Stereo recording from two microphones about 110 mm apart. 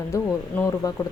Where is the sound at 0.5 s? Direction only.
15° left (ahead or behind).